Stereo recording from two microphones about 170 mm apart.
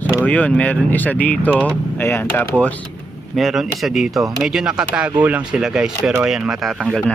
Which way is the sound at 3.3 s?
Centre (ahead or behind).